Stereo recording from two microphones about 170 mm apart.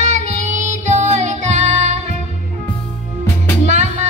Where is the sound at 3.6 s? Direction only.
45° right (ahead or behind).